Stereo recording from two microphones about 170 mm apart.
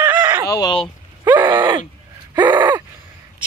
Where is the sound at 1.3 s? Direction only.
25° right (ahead or behind).